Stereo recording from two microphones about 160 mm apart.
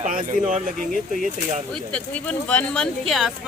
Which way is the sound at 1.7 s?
10° left (ahead or behind).